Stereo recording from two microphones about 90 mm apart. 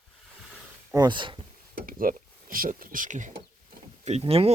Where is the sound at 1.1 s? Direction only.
65° right (ahead or behind).